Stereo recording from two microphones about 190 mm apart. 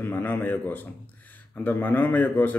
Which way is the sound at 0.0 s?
10° left (ahead or behind).